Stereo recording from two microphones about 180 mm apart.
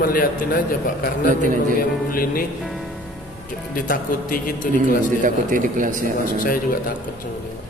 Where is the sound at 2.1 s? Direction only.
55° left (ahead or behind).